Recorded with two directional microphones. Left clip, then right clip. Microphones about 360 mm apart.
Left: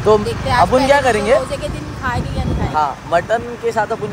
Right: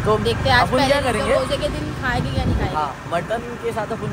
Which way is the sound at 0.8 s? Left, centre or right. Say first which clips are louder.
Left 6 dB; centre.